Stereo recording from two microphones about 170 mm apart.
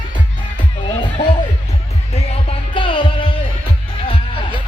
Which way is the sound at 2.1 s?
30° left (ahead or behind).